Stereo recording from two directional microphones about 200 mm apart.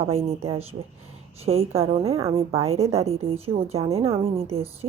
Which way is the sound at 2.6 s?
30° right (ahead or behind).